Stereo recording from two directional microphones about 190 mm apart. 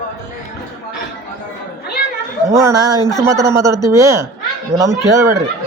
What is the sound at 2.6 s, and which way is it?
A woman's voice, 20° right (ahead or behind).